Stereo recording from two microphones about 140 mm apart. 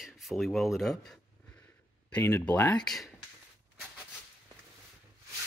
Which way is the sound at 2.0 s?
15° left (ahead or behind).